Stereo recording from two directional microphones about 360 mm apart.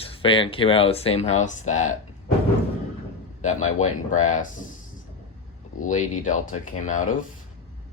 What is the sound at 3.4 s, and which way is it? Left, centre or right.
A man's voice, left.